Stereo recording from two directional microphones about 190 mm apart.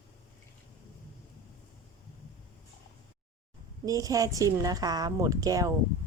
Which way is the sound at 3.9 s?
20° right (ahead or behind).